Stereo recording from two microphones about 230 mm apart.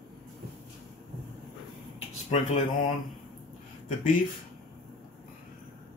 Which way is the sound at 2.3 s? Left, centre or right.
Left.